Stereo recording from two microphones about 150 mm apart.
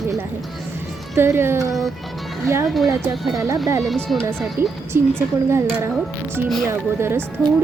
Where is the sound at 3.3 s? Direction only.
20° right (ahead or behind).